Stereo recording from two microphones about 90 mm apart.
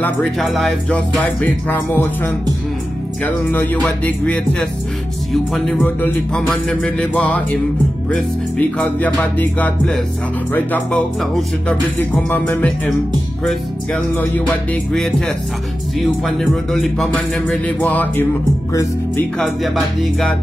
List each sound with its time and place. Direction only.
0.4 s speech: centre (ahead or behind)
0.9 s music: 15° left (ahead or behind)
4.0 s music: 15° left (ahead or behind)
5.3 s speech: centre (ahead or behind)
5.8 s music: 20° left (ahead or behind)
6.3 s speech: 5° left (ahead or behind)
7.0 s music: 15° left (ahead or behind)
8.5 s music: 15° left (ahead or behind)
13.4 s speech: centre (ahead or behind)
14.1 s music: 20° left (ahead or behind)
14.9 s speech: 5° left (ahead or behind)
19.3 s speech: centre (ahead or behind)